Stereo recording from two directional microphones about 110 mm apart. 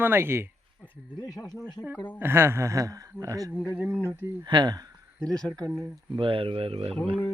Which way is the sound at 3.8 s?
15° right (ahead or behind).